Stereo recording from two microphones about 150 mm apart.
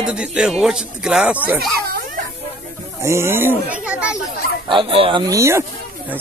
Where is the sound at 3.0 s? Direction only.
15° right (ahead or behind).